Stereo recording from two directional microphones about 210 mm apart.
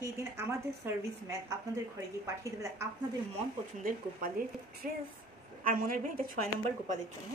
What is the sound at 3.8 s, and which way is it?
Speech, 40° right (ahead or behind).